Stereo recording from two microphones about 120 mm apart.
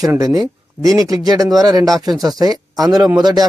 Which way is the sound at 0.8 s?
30° right (ahead or behind).